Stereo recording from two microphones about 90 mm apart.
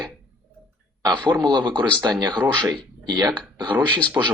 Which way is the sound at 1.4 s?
55° right (ahead or behind).